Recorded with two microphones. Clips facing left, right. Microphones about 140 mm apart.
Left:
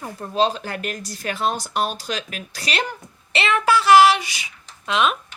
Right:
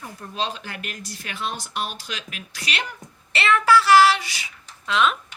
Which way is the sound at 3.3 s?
20° left (ahead or behind).